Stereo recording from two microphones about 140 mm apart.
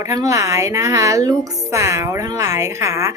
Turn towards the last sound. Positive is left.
turn(degrees=-20)  # may be behind; listen again after turning